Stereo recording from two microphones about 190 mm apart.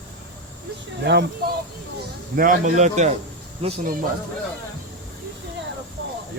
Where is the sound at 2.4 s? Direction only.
40° right (ahead or behind).